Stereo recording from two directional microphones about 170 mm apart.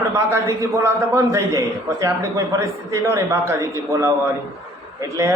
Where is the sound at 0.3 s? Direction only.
20° right (ahead or behind).